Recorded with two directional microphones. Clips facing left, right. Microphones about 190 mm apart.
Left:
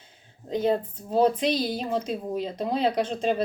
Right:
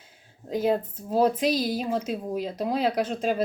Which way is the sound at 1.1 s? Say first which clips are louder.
Even; 5° right (ahead or behind).